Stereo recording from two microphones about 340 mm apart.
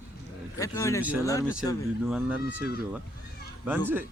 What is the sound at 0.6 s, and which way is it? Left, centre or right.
Speech, centre.